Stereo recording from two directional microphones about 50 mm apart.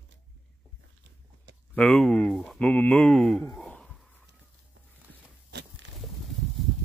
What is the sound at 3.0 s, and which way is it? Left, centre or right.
Speech, centre.